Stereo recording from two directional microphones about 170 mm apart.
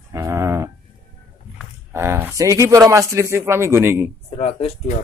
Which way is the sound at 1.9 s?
15° right (ahead or behind).